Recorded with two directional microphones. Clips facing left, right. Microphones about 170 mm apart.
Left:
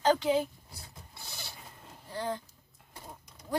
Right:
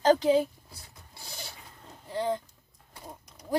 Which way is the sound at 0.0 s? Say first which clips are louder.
Right 4 dB; 35° right (ahead or behind).